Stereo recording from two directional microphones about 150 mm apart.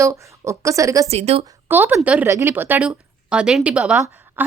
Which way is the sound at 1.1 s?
45° right (ahead or behind).